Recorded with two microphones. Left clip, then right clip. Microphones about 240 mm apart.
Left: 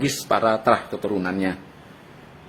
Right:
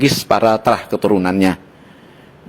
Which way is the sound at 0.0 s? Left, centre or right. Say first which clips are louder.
Right 7 dB; right.